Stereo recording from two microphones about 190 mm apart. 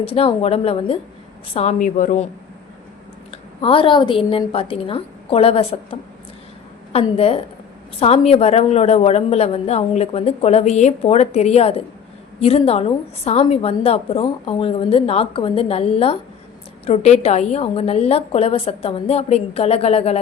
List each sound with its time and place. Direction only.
0.0 s speech: 30° left (ahead or behind)
3.3 s a woman's voice: 30° left (ahead or behind)